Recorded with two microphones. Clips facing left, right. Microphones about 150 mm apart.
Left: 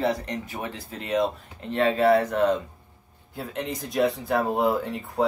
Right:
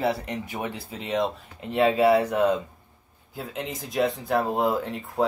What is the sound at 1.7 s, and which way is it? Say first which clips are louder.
Speech: right 1 dB; 10° right (ahead or behind).